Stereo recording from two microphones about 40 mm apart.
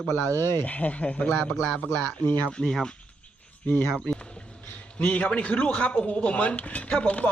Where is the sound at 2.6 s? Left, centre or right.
Centre.